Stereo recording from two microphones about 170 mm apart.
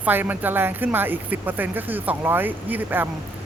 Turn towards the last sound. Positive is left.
turn(degrees=-10)  # may be behind; listen again after turning